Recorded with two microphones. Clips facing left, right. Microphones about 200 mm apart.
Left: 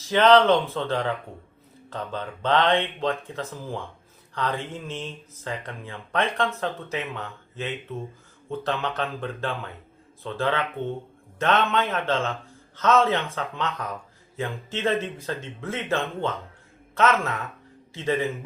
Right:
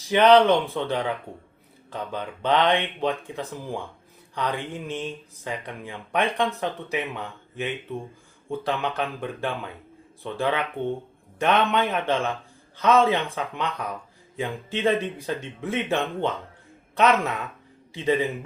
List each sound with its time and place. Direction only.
0.1 s speech: 15° right (ahead or behind)